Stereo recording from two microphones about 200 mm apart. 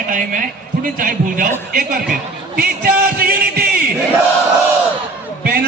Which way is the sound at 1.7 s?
45° right (ahead or behind).